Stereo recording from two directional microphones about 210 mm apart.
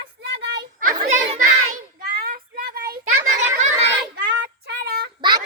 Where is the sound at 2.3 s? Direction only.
50° right (ahead or behind).